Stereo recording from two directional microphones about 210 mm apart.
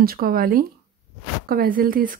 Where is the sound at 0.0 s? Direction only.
45° right (ahead or behind).